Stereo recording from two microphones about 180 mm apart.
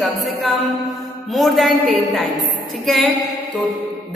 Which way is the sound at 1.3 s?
Centre (ahead or behind).